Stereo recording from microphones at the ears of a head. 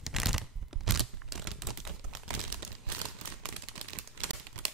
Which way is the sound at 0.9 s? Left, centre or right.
Right.